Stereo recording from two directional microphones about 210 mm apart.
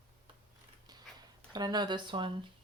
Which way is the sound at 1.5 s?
20° right (ahead or behind).